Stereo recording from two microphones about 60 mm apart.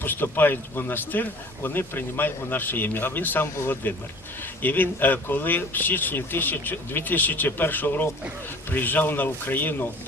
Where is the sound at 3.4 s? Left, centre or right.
Left.